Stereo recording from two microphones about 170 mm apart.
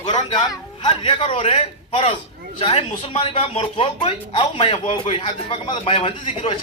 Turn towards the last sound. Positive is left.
turn(degrees=35)  # may be behind; listen again after turning